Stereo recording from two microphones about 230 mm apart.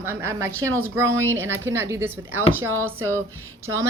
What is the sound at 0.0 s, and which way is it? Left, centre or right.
A woman's voice, centre.